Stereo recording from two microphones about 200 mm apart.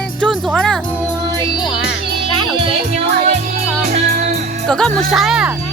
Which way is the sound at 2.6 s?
30° right (ahead or behind).